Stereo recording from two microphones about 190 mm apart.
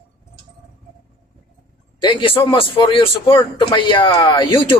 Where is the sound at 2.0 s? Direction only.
25° left (ahead or behind).